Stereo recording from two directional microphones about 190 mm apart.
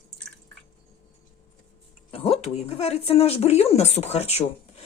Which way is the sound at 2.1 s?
30° left (ahead or behind).